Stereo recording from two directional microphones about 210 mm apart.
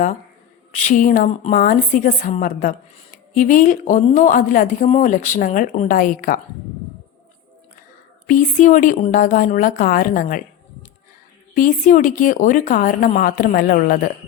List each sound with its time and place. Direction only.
0.7 s a woman's voice: 35° left (ahead or behind)
8.3 s a woman's voice: 35° left (ahead or behind)
11.5 s a woman's voice: 40° left (ahead or behind)